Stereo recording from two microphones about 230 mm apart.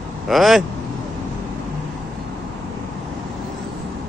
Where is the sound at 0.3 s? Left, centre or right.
Centre.